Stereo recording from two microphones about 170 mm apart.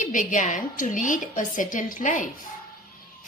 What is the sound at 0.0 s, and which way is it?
A woman's voice, 50° left (ahead or behind).